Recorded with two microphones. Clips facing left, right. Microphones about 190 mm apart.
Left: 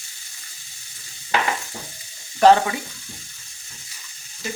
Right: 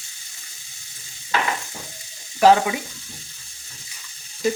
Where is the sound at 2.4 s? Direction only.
5° right (ahead or behind).